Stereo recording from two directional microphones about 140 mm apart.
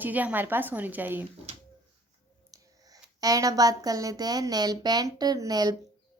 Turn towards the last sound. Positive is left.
turn(degrees=-30)  # may be behind; listen again after turning